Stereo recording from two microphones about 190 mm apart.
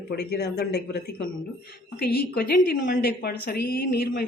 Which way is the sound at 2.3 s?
50° left (ahead or behind).